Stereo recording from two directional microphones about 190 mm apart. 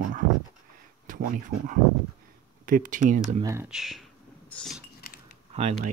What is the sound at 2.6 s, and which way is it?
Speech, 45° right (ahead or behind).